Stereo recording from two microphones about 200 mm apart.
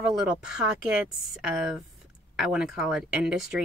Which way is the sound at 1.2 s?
Centre (ahead or behind).